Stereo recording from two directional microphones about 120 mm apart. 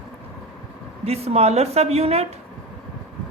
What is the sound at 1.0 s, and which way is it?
Speech, 60° right (ahead or behind).